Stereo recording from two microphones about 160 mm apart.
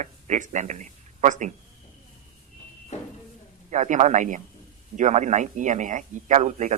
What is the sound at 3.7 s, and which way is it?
Speech, 50° right (ahead or behind).